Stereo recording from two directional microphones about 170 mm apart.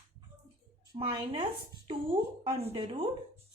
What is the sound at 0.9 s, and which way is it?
A woman's voice, 30° right (ahead or behind).